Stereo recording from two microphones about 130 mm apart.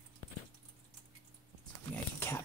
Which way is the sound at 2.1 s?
20° left (ahead or behind).